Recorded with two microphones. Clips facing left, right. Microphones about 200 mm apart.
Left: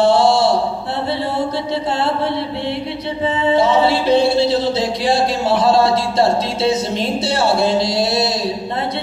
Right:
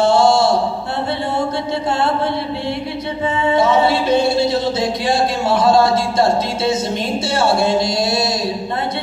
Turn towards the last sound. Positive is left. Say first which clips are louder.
# left 1 dB
turn(degrees=30)  # may be behind; listen again after turning